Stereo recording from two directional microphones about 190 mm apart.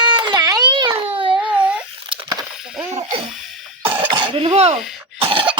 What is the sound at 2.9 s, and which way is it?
Speech, 35° right (ahead or behind).